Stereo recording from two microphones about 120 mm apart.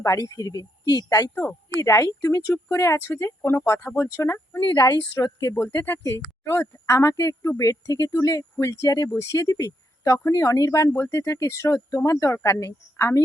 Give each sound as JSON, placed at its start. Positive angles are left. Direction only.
{"t": 0.0, "sound": "speech", "side_deg": 30}
{"t": 4.6, "sound": "speech", "side_deg": 35}
{"t": 5.6, "sound": "speech", "side_deg": 20}